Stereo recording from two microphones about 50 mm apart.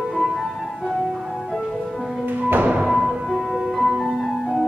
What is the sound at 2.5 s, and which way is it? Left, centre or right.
Music, right.